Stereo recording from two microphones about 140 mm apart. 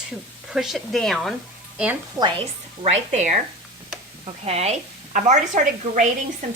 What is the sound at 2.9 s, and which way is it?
A woman's voice, 55° right (ahead or behind).